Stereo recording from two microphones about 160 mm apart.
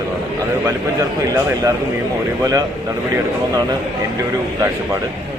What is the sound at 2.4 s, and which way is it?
Speech, 20° right (ahead or behind).